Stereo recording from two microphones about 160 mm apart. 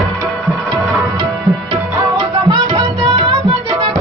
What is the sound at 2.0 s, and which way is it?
Music, 30° right (ahead or behind).